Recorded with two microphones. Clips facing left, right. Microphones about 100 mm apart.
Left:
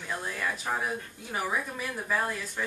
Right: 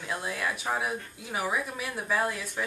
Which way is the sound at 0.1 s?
10° right (ahead or behind).